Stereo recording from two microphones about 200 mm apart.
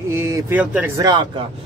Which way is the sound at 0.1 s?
10° right (ahead or behind).